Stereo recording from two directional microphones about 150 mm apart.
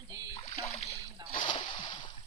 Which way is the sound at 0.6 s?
45° left (ahead or behind).